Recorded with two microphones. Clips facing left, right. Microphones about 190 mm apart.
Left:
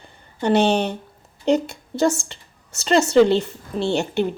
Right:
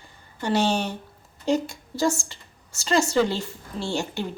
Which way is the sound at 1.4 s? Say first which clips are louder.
Left 4 dB; 65° left (ahead or behind).